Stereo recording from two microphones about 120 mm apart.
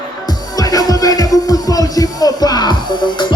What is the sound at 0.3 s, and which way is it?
Music, 30° left (ahead or behind).